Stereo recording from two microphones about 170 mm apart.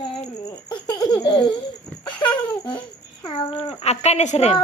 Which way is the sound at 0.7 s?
25° left (ahead or behind).